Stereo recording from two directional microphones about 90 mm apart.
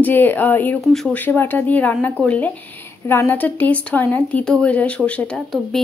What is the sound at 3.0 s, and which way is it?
Speech, 25° left (ahead or behind).